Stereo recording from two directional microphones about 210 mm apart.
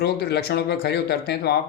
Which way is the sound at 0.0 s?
50° left (ahead or behind).